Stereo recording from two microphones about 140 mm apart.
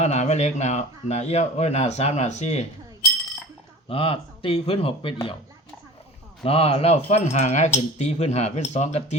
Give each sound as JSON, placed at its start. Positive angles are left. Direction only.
{"t": 0.0, "sound": "speech", "side_deg": 55}
{"t": 3.8, "sound": "speech", "side_deg": 40}
{"t": 6.4, "sound": "speech", "side_deg": 45}